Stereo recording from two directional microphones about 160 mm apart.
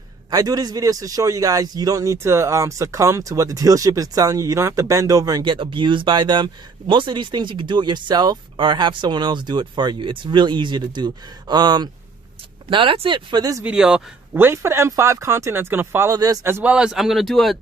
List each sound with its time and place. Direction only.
0.3 s a man's voice: 25° right (ahead or behind)
13.7 s speech: 5° right (ahead or behind)